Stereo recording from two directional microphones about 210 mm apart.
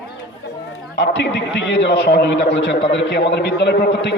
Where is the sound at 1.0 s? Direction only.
55° left (ahead or behind).